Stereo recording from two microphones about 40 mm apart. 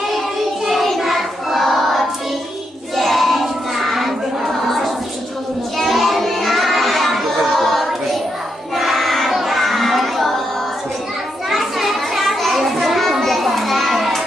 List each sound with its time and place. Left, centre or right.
0.6 s child singing: centre
2.9 s crowd: centre
5.7 s children playing: centre
8.7 s child singing: centre
11.4 s children playing: centre